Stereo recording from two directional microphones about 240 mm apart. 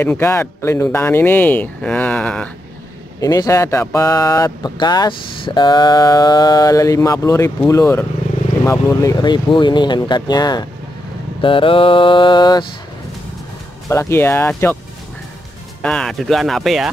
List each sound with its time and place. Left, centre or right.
0.0 s speech: centre
11.4 s mantra: left
13.8 s speech: centre
15.8 s speech: centre